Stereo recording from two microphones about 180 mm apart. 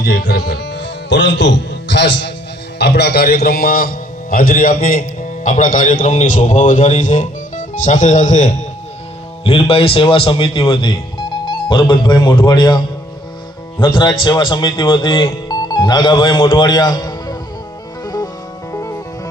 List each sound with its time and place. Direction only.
0.0 s speech: 60° left (ahead or behind); by 2.3 s 80° left
2.7 s a man's voice: 70° left (ahead or behind); by 8.5 s 40° left (ahead or behind)
9.4 s speech: 30° left (ahead or behind)
13.8 s speech: 25° left (ahead or behind)
18.0 s music: 20° left (ahead or behind)